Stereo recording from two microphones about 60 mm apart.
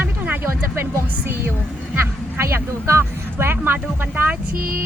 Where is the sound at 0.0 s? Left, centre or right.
Right.